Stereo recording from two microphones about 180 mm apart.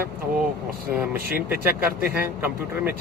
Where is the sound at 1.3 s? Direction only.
55° right (ahead or behind).